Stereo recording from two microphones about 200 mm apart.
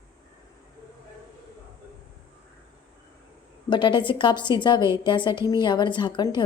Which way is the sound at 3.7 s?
25° left (ahead or behind).